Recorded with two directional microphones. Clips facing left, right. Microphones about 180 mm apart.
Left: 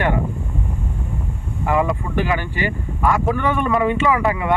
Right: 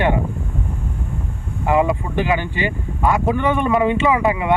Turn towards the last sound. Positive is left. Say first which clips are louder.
# right 1 dB
turn(degrees=-20)  # may be behind; listen again after turning